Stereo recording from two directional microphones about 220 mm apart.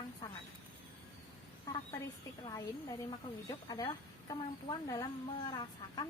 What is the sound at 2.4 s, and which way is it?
Speech, 15° left (ahead or behind).